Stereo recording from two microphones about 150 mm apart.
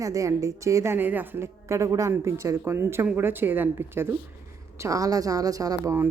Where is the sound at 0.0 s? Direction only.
20° right (ahead or behind).